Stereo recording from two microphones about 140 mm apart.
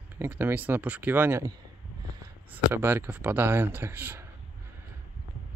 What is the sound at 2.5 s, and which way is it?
Speech, 15° right (ahead or behind).